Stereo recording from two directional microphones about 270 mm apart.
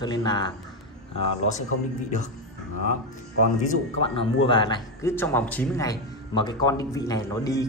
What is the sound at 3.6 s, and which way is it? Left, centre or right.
Speech, left.